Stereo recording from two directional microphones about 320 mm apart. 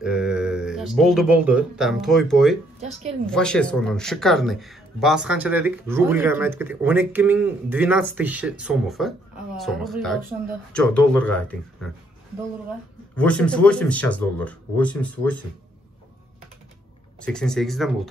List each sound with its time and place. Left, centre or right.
0.0 s speech: centre
2.8 s a woman's voice: centre
3.3 s speech: centre
13.1 s speech: centre
17.2 s speech: centre